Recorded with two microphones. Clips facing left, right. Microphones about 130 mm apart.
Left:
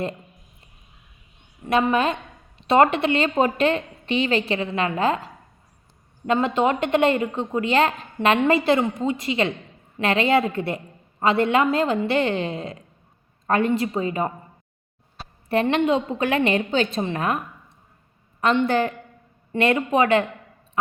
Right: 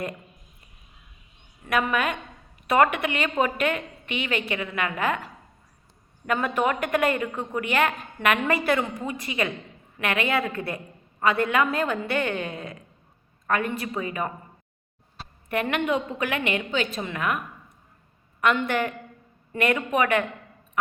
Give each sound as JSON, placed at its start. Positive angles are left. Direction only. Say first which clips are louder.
{"t": 1.6, "sound": "a woman's voice", "louder": "left 5 dB", "side_deg": 25}
{"t": 15.4, "sound": "a woman's voice", "louder": "left 5 dB", "side_deg": 30}